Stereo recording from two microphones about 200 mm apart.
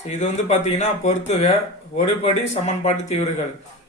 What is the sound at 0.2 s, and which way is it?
Speech, 35° left (ahead or behind).